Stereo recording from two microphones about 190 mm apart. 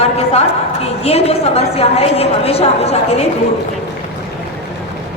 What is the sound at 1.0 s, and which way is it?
Speech, 35° left (ahead or behind).